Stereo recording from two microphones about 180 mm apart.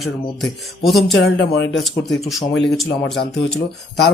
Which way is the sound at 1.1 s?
75° left (ahead or behind).